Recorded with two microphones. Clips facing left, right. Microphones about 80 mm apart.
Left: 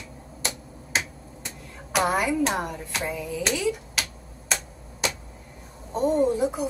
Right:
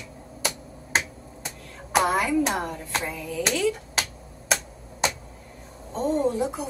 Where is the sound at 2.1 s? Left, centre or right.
Centre.